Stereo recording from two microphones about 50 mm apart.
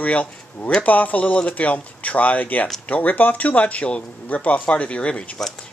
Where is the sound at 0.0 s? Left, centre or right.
Left.